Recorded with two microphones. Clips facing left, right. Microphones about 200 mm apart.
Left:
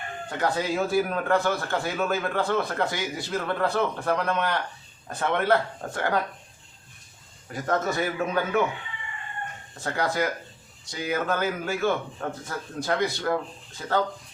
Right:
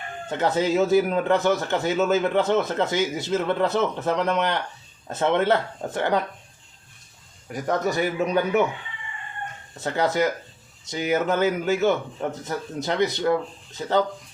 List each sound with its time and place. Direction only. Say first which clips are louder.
0.3 s a man's voice: right 4 dB; 20° right (ahead or behind)
7.5 s a man's voice: right 2 dB; 15° right (ahead or behind)
9.8 s a man's voice: right 4 dB; 20° right (ahead or behind)